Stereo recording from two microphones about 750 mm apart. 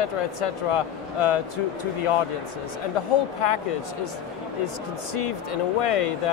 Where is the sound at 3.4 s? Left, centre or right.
Left.